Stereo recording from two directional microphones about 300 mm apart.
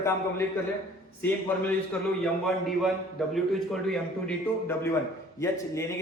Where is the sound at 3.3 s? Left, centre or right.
Centre.